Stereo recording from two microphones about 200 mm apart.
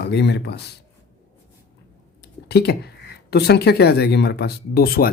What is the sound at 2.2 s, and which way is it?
Speech, 55° left (ahead or behind).